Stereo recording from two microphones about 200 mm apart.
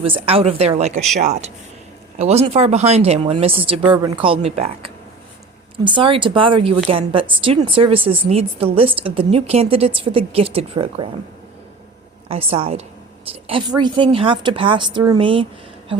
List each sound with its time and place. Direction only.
0.0 s a woman's voice: 30° right (ahead or behind)
12.3 s a woman's voice: 30° right (ahead or behind)